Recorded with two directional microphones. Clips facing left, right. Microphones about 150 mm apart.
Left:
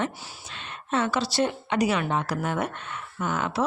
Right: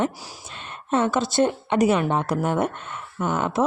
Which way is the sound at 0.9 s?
50° right (ahead or behind).